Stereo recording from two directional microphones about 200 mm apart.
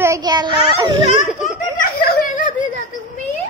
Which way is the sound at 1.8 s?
50° left (ahead or behind).